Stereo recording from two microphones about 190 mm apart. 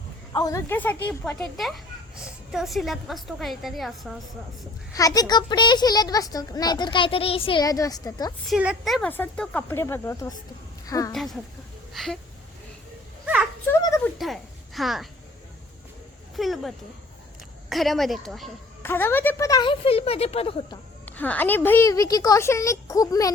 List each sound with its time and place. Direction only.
0.3 s a woman's voice: 15° left (ahead or behind); by 4.2 s centre (ahead or behind)
4.9 s speech: 20° left (ahead or behind)
8.4 s a woman's voice: 5° right (ahead or behind); by 11.1 s 20° left (ahead or behind)
11.1 s speech: centre (ahead or behind)
13.2 s a sound: 5° right (ahead or behind)
13.7 s a sound: 15° left (ahead or behind)
14.2 s a woman's voice: centre (ahead or behind)
16.3 s a woman's voice: centre (ahead or behind)
18.8 s speech: 10° left (ahead or behind); by 20.7 s 30° left (ahead or behind)
21.0 s a woman's voice: 10° left (ahead or behind)